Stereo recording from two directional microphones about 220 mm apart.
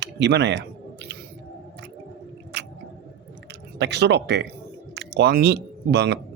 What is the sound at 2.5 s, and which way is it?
Chewing, 50° right (ahead or behind).